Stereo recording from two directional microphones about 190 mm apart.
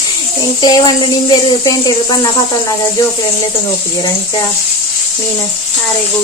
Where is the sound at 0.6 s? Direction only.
20° left (ahead or behind).